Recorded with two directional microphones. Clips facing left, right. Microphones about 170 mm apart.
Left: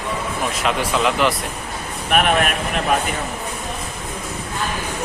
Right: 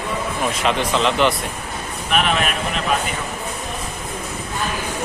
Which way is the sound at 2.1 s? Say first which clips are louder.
Left 3 dB; 50° left (ahead or behind).